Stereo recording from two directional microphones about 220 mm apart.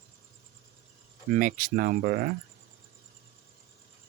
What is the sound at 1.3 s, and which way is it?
Speech, 40° right (ahead or behind).